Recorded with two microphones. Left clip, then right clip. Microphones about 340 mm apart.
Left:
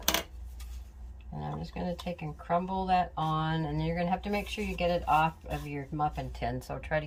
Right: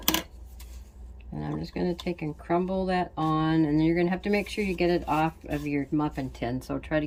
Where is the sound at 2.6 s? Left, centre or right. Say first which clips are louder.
Even; left.